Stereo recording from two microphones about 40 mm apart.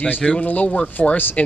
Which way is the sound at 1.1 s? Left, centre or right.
Left.